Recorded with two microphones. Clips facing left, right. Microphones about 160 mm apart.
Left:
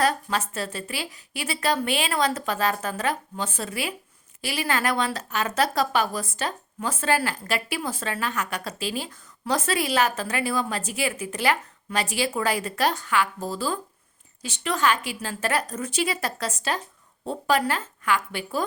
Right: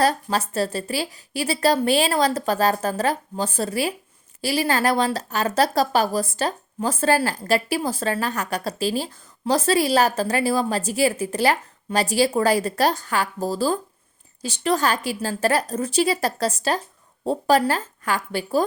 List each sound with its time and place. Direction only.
0.0 s speech: 35° right (ahead or behind)